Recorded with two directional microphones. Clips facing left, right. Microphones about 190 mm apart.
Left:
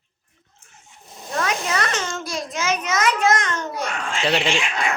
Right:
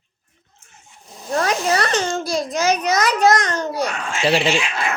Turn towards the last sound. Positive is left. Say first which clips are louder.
# right 2 dB
turn(degrees=-5)  # may be behind; listen again after turning